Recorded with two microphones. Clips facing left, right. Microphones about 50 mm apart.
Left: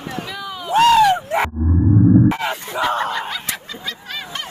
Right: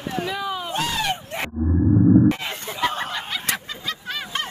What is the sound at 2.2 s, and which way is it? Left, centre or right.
Music, left.